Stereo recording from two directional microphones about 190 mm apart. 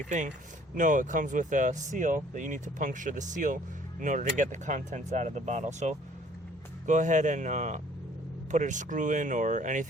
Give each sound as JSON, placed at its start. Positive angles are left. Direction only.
{"t": 0.8, "sound": "speech", "side_deg": -45}